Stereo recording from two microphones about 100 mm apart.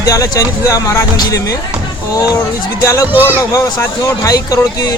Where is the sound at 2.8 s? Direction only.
30° left (ahead or behind).